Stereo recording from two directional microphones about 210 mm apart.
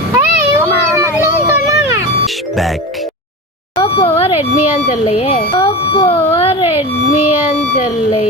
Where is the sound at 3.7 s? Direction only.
25° left (ahead or behind).